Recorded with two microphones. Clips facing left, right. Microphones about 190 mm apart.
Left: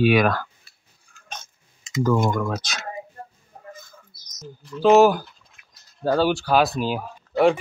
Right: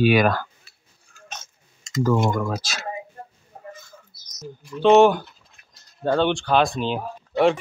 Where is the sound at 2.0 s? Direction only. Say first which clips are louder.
Even; 5° right (ahead or behind).